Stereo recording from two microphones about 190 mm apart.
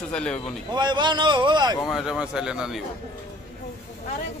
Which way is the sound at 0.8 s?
25° right (ahead or behind).